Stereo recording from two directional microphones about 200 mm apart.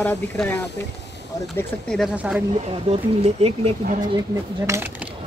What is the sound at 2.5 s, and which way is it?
Speech, 30° right (ahead or behind).